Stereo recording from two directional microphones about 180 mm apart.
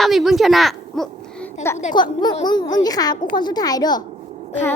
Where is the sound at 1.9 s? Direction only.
25° left (ahead or behind).